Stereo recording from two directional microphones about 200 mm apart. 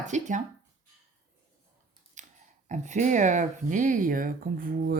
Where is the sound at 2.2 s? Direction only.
35° right (ahead or behind).